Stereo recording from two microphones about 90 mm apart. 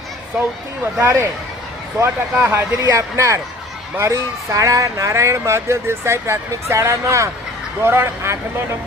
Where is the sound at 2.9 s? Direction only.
35° right (ahead or behind).